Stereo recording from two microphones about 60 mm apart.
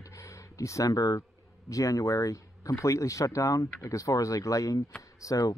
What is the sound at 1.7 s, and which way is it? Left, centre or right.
Speech, left.